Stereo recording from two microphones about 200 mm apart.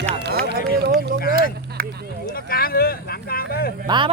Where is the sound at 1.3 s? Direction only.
45° right (ahead or behind).